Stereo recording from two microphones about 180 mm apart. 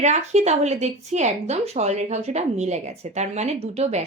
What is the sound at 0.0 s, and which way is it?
Speech, 40° right (ahead or behind).